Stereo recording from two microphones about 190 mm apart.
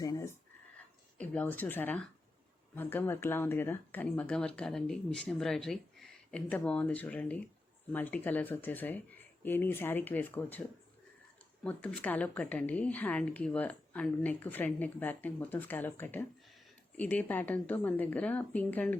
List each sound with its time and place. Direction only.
0.0 s a sound: 20° left (ahead or behind)
1.2 s speech: 5° left (ahead or behind)
11.6 s speech: 5° left (ahead or behind)